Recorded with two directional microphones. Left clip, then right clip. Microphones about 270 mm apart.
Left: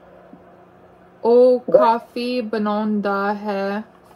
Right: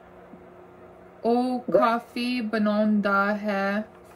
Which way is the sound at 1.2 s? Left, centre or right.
Centre.